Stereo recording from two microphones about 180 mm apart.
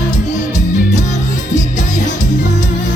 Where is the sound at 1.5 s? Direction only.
40° left (ahead or behind).